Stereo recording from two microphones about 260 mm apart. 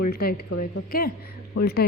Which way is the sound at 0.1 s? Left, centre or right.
Left.